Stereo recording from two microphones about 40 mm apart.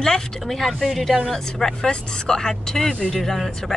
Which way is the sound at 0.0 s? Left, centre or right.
Centre.